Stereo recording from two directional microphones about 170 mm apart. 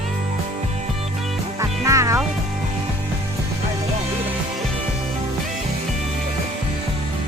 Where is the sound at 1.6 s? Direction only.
20° right (ahead or behind).